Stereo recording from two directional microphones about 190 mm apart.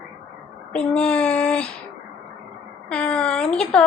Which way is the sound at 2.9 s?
5° left (ahead or behind).